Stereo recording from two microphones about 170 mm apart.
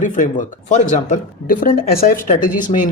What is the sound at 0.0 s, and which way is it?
Speech, 50° left (ahead or behind).